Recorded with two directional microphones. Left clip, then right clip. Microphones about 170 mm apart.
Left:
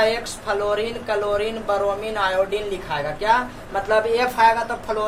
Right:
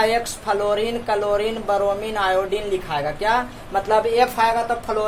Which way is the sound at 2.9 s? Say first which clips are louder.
Left 2 dB; 45° right (ahead or behind).